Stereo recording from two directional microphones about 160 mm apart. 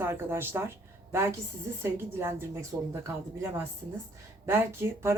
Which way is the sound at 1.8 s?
15° right (ahead or behind).